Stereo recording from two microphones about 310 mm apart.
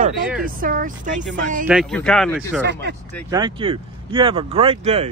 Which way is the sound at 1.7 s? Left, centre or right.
Centre.